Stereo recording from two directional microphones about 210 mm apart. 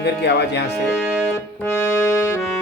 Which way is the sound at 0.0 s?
55° left (ahead or behind).